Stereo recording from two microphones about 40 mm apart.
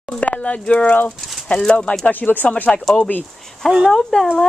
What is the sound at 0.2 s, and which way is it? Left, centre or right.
Speech, left.